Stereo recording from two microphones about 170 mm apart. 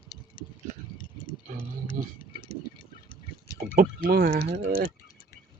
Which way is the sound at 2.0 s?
50° right (ahead or behind).